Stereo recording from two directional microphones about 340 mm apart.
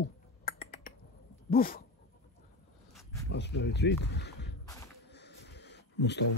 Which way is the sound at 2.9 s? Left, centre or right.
Centre.